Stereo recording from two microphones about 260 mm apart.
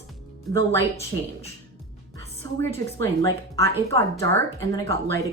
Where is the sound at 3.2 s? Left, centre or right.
Centre.